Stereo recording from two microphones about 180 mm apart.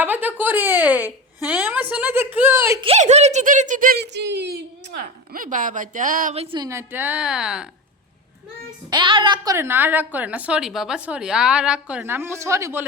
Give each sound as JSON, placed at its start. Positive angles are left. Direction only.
{"t": 0.0, "sound": "a woman's voice", "side_deg": -10}
{"t": 2.8, "sound": "speech", "side_deg": -35}
{"t": 4.0, "sound": "a woman's voice", "side_deg": -75}
{"t": 6.3, "sound": "speech", "side_deg": -35}
{"t": 6.6, "sound": "a woman's voice", "side_deg": -15}
{"t": 8.9, "sound": "a woman's voice", "side_deg": -25}